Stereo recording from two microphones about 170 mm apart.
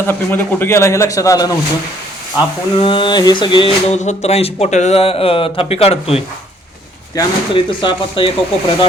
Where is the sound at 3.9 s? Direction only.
40° left (ahead or behind).